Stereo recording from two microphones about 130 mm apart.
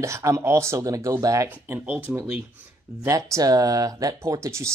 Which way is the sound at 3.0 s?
25° right (ahead or behind).